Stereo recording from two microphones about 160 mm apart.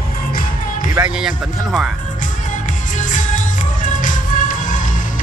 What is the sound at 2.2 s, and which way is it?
Music, 50° left (ahead or behind).